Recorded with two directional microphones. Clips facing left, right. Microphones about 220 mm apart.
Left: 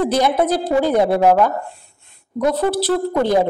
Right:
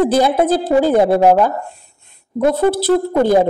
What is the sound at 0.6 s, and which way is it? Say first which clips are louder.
Speech: right 4 dB; 5° right (ahead or behind).